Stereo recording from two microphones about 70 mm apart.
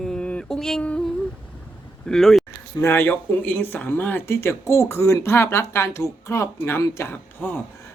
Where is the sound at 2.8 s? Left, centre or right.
Left.